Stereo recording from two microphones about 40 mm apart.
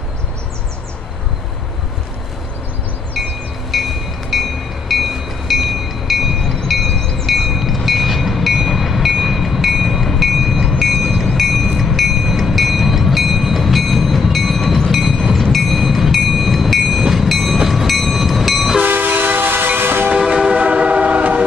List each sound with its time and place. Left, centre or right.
3.2 s wind chime: centre
3.7 s train: centre
6.7 s wind chime: centre
7.3 s train: centre
15.3 s vehicle: centre
17.0 s train: centre
18.9 s train: right
20.2 s train: right